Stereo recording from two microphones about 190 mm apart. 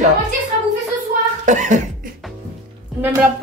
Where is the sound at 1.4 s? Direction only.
40° right (ahead or behind).